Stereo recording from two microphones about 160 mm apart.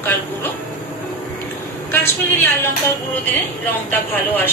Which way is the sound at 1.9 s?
10° left (ahead or behind).